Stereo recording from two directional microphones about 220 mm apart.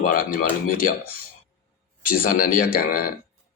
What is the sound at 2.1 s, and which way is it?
Speech, 40° left (ahead or behind).